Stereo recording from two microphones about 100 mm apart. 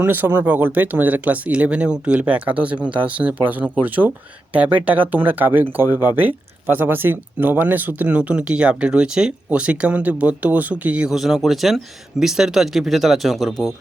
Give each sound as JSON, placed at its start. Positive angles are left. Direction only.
{"t": 0.0, "sound": "speech", "side_deg": -20}